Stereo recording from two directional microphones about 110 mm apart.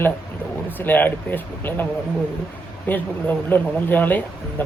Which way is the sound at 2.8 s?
15° left (ahead or behind).